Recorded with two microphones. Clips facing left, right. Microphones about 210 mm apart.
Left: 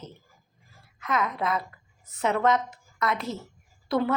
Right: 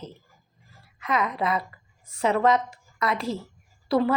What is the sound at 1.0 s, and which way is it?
A woman's voice, centre (ahead or behind).